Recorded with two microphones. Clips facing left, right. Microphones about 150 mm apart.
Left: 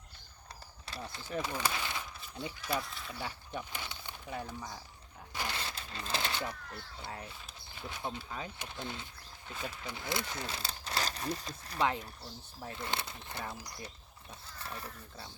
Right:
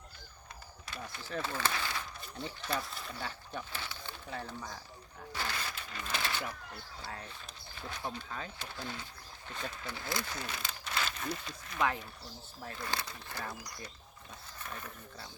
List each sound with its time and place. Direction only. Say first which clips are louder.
0.9 s speech: left 1 dB; 30° left (ahead or behind)
1.3 s speech: even; 15° left (ahead or behind)
5.3 s a sound: even; 20° left (ahead or behind)
7.0 s speech: even; 20° left (ahead or behind)
12.6 s speech: left 1 dB; 20° left (ahead or behind)